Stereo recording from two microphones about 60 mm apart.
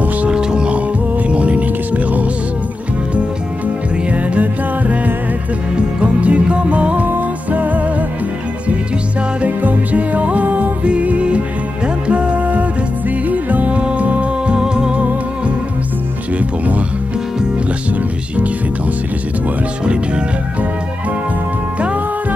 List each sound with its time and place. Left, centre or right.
0.3 s music: centre
4.3 s music: right
9.4 s music: right